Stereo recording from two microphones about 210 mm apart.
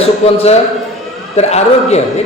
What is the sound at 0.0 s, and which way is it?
A man's voice, 30° left (ahead or behind).